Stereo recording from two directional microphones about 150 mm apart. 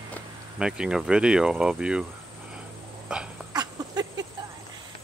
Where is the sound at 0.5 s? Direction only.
5° right (ahead or behind).